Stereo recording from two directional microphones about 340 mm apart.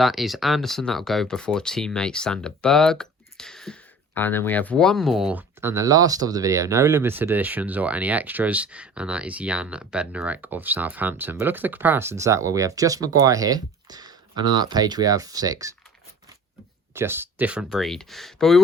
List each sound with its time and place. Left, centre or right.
0.0 s speech: centre
16.9 s speech: centre